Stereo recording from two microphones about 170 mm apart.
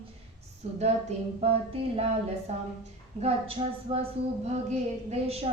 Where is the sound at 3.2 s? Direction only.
35° right (ahead or behind).